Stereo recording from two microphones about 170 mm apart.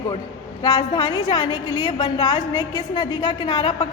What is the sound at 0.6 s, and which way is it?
A woman's voice, 25° left (ahead or behind).